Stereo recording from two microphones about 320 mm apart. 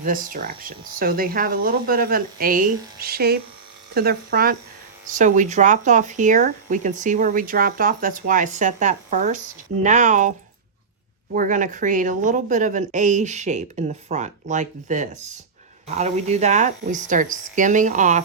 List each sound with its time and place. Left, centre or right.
0.0 s speech: right
11.3 s speech: right